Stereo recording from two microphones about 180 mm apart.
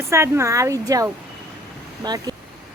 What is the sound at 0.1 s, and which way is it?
A woman's voice, 15° right (ahead or behind).